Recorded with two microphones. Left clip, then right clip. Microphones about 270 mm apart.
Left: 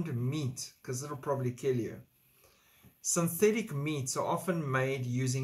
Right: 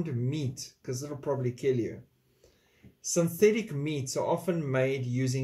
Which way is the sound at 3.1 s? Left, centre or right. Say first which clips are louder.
Right 4 dB; centre.